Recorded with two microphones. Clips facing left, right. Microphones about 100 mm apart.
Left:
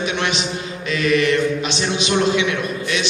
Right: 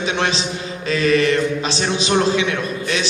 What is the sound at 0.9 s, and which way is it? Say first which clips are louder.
A man's voice: right 1 dB; 35° right (ahead or behind).